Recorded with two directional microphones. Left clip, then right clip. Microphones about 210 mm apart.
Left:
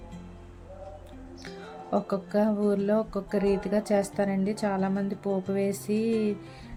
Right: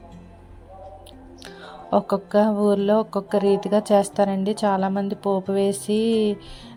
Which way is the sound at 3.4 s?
75° right (ahead or behind).